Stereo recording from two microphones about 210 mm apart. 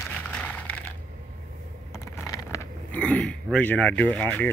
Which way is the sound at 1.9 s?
15° left (ahead or behind).